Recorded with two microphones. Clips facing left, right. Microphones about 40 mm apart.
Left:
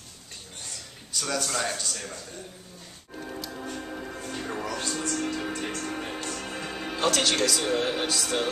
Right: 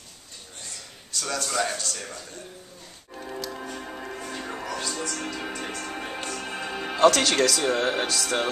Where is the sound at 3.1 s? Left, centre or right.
Centre.